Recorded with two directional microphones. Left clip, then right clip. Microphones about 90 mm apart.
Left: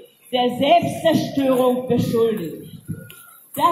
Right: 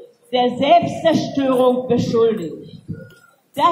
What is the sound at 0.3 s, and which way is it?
A man's voice, 25° left (ahead or behind).